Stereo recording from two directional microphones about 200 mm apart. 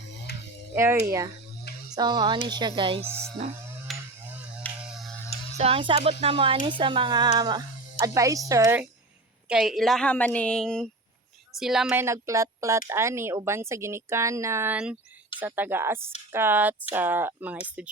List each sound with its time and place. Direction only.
0.1 s music: 60° left (ahead or behind)
0.8 s speech: 15° right (ahead or behind)
3.0 s speech: 10° right (ahead or behind)
3.9 s a sound: centre (ahead or behind)
4.9 s music: centre (ahead or behind)
5.5 s speech: 30° right (ahead or behind); by 8.9 s 10° right (ahead or behind)
9.5 s a woman's voice: centre (ahead or behind)